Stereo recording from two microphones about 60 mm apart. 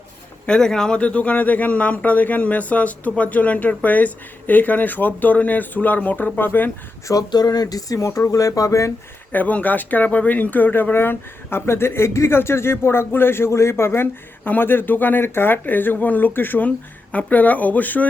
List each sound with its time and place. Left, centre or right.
0.4 s speech: centre; by 6.7 s left
7.1 s speech: left
9.3 s speech: left